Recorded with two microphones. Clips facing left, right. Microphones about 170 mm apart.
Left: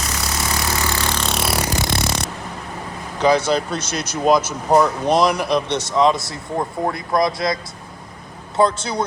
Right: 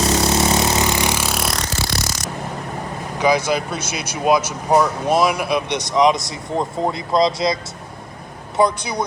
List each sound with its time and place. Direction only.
0.0 s vehicle: 30° right (ahead or behind); by 1.9 s 15° left (ahead or behind)
2.0 s a sound: 60° left (ahead or behind)
3.2 s speech: 10° right (ahead or behind)